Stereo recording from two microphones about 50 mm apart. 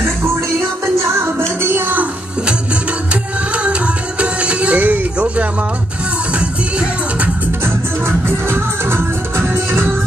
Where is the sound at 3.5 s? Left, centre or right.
Right.